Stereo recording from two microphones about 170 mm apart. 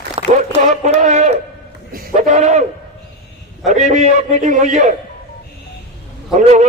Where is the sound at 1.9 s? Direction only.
50° right (ahead or behind).